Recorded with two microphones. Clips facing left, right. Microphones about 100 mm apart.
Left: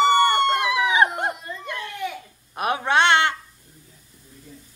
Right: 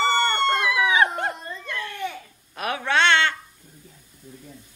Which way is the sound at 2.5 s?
20° left (ahead or behind).